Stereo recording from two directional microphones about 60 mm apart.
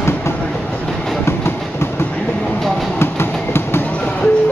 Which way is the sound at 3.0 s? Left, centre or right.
Left.